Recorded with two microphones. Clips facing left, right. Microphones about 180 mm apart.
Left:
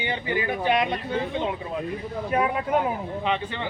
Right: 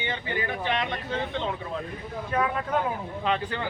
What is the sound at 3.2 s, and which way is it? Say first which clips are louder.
Speech: right 1 dB; centre (ahead or behind).